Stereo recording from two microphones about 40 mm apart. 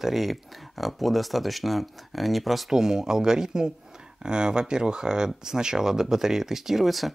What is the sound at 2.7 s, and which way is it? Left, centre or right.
Speech, centre.